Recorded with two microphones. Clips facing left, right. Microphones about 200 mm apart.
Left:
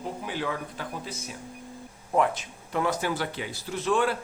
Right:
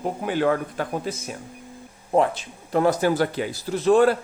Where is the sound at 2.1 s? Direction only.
30° right (ahead or behind).